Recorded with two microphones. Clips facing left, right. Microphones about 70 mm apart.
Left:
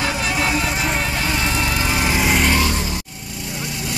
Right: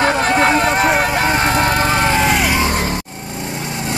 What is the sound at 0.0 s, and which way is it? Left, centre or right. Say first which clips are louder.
Vehicle: right 7 dB; right.